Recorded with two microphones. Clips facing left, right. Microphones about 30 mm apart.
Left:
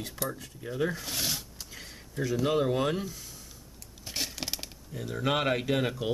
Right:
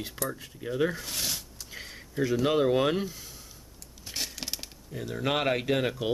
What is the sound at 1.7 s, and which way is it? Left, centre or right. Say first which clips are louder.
Speech: right 4 dB; centre.